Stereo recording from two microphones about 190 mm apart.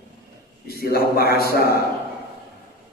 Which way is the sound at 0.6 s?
55° left (ahead or behind).